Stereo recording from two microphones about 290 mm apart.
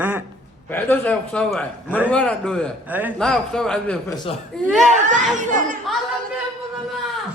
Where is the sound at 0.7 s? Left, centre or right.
Centre.